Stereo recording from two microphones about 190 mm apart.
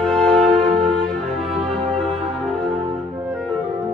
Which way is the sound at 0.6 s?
30° right (ahead or behind).